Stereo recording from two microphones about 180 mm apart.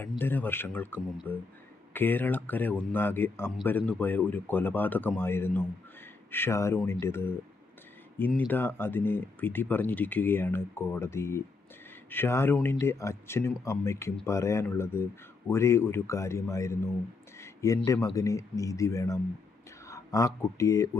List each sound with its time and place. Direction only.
0.2 s speech: 10° left (ahead or behind)
17.3 s a sound: 15° left (ahead or behind)
18.1 s speech: 15° left (ahead or behind)